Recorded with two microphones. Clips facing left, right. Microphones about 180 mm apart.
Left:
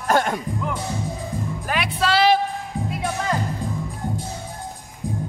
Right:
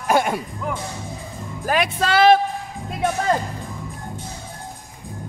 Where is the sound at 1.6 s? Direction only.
45° right (ahead or behind).